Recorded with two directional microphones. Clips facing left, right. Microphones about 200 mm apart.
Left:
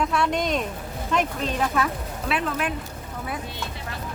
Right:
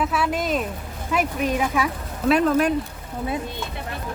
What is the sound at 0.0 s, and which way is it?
Speech, 5° right (ahead or behind).